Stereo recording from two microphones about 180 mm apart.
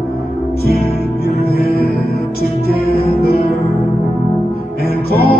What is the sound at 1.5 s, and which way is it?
Music, 60° left (ahead or behind).